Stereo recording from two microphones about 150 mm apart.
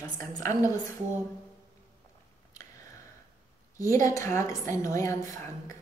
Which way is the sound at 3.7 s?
20° left (ahead or behind).